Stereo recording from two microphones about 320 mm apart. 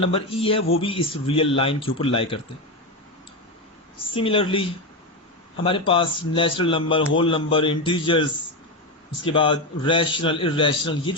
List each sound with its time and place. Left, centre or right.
0.1 s a man's voice: centre
4.1 s a man's voice: centre